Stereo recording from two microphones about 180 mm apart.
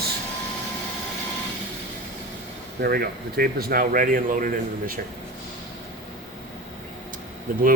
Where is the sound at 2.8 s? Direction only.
60° right (ahead or behind).